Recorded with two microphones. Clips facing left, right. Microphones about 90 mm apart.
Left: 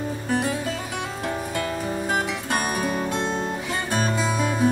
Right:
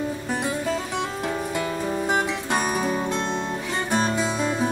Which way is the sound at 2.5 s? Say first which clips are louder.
Right 1 dB; 5° left (ahead or behind).